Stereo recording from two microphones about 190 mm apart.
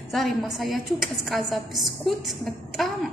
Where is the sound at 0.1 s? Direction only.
Centre (ahead or behind).